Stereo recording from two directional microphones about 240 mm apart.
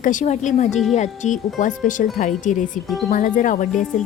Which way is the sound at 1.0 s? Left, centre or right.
Left.